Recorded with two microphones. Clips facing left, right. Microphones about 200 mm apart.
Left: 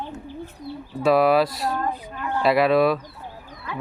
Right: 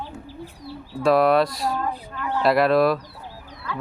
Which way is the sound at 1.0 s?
5° left (ahead or behind).